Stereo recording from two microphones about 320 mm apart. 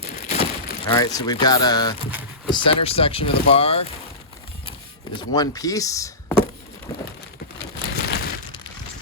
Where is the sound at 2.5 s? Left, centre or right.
Centre.